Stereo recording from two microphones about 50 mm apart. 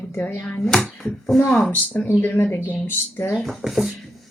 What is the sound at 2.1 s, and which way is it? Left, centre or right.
A woman's voice, left.